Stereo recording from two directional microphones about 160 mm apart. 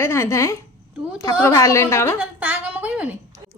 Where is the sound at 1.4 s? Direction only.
15° left (ahead or behind).